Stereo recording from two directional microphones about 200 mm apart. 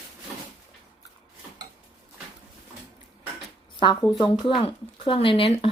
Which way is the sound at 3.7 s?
20° left (ahead or behind).